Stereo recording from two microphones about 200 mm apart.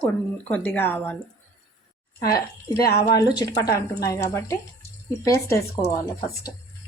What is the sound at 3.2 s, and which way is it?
Speech, 20° left (ahead or behind).